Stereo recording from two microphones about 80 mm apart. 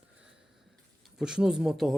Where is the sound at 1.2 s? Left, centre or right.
Centre.